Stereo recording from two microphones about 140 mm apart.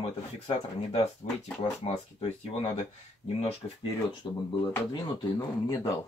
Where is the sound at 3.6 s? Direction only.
30° left (ahead or behind).